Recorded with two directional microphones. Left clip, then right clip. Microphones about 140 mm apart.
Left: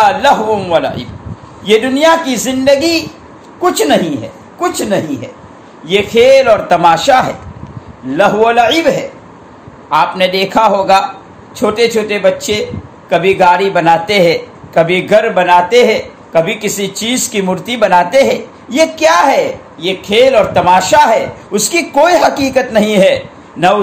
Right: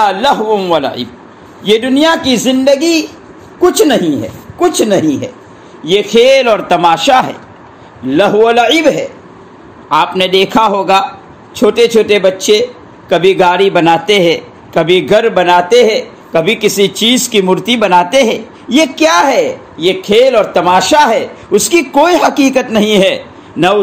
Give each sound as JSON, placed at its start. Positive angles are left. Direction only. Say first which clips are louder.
{"t": 0.0, "sound": "a man's voice", "louder": "left 1 dB", "side_deg": -40}
{"t": 8.1, "sound": "a man's voice", "louder": "right 1 dB", "side_deg": -45}